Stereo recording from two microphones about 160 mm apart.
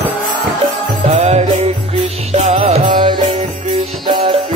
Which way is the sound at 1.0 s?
40° right (ahead or behind).